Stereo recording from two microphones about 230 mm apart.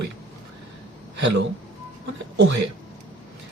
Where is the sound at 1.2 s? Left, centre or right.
Right.